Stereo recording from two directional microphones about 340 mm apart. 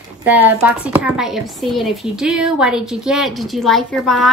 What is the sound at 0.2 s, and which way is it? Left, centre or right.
A woman's voice, centre.